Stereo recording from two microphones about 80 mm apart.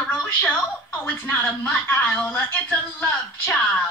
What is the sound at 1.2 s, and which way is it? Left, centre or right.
Speech, left.